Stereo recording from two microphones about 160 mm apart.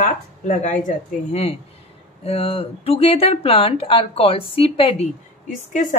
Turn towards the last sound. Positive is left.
turn(degrees=50)  # may be behind; listen again after turning